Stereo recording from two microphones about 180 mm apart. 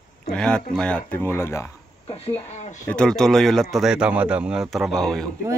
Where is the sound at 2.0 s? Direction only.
35° left (ahead or behind).